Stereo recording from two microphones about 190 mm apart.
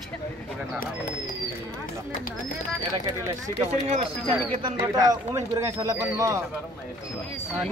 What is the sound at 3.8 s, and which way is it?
Speech, 30° right (ahead or behind).